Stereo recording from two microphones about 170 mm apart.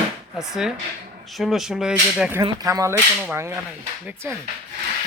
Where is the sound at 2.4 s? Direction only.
20° right (ahead or behind).